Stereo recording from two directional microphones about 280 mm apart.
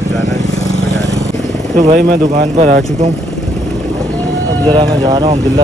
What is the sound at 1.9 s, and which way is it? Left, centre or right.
Speech, right.